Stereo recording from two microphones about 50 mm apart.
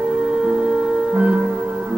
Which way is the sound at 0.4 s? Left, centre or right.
Centre.